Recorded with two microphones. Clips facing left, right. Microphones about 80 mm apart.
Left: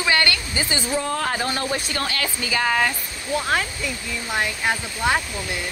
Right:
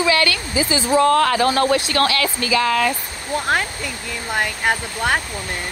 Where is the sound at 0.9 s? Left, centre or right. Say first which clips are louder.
Right 12 dB; right.